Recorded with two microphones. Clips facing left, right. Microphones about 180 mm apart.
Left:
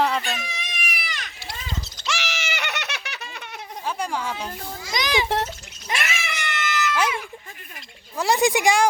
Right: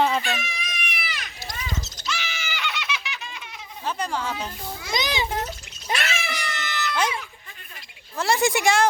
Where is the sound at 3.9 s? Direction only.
10° left (ahead or behind).